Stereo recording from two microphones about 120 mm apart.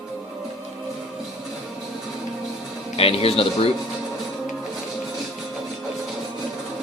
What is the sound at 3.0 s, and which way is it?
Speech, 55° left (ahead or behind).